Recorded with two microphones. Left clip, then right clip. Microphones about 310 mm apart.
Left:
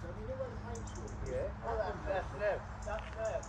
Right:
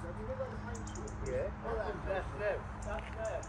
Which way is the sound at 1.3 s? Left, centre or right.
Left.